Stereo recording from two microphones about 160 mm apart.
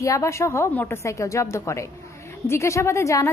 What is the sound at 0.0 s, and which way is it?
A woman's voice, 20° left (ahead or behind).